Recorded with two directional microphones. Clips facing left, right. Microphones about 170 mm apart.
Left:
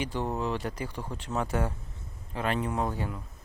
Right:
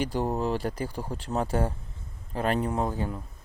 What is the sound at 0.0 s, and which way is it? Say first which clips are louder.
Speech: right 3 dB; 40° right (ahead or behind).